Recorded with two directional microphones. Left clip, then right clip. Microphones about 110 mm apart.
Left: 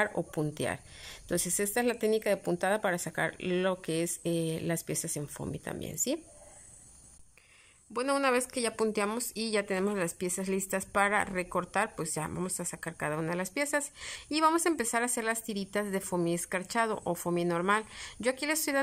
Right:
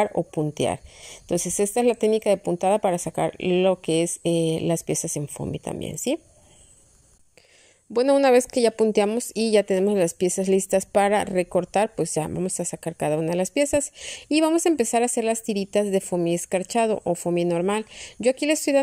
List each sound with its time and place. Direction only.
0.1 s speech: 5° right (ahead or behind)
0.6 s a woman's voice: 20° right (ahead or behind)
7.9 s a woman's voice: 40° right (ahead or behind); by 18.8 s 20° right (ahead or behind)